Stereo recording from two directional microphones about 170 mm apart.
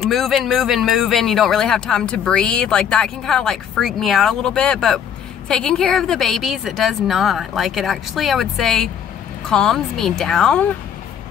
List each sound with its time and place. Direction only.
0.1 s speech: centre (ahead or behind)